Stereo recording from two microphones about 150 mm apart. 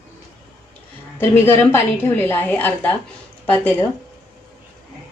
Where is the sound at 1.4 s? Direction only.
15° left (ahead or behind).